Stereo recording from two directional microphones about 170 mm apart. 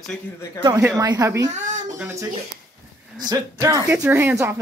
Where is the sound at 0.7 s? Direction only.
10° right (ahead or behind).